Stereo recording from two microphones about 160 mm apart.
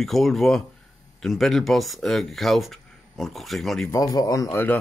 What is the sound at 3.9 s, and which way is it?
Speech, 20° left (ahead or behind).